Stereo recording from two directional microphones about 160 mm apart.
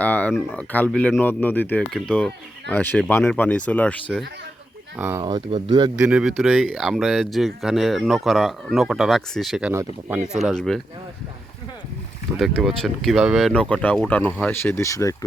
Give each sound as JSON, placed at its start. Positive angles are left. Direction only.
{"t": 0.0, "sound": "speech", "side_deg": 10}
{"t": 4.9, "sound": "speech", "side_deg": -10}
{"t": 5.2, "sound": "speech", "side_deg": -30}
{"t": 6.0, "sound": "speech", "side_deg": -5}
{"t": 12.4, "sound": "speech", "side_deg": 0}